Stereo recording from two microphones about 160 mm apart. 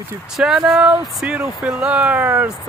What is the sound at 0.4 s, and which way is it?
Speech, 5° right (ahead or behind).